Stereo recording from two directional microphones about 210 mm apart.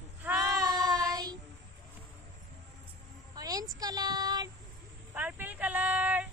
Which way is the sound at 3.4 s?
15° right (ahead or behind).